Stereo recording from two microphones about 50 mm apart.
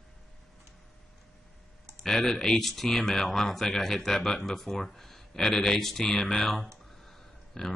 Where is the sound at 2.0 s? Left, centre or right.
Centre.